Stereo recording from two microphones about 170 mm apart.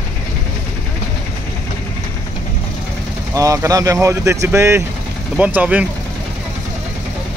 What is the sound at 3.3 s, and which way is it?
Speech, 20° right (ahead or behind).